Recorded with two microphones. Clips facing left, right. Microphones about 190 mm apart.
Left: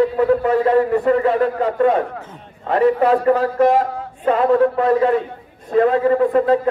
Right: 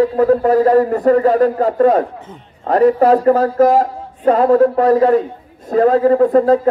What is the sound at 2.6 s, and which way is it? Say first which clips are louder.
Speech: right 4 dB; 40° right (ahead or behind).